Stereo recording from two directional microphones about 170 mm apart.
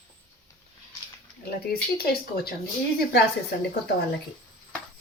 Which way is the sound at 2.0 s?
65° left (ahead or behind).